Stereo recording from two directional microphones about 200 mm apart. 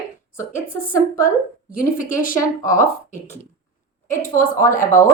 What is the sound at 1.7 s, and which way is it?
Speech, 40° left (ahead or behind).